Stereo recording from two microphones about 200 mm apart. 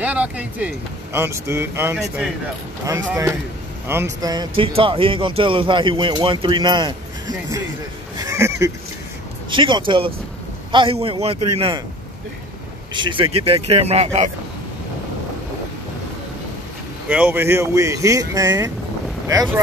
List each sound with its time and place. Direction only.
0.0 s speech: 5° right (ahead or behind)
2.8 s speech: 15° right (ahead or behind)
8.2 s honk: 15° right (ahead or behind)
9.5 s speech: 25° right (ahead or behind)
12.9 s speech: 25° right (ahead or behind)
17.1 s speech: 10° right (ahead or behind)